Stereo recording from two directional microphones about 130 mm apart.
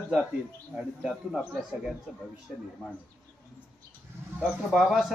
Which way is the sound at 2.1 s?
5° right (ahead or behind).